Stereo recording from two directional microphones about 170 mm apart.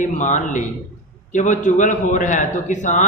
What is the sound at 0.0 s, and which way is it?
Speech, 45° left (ahead or behind).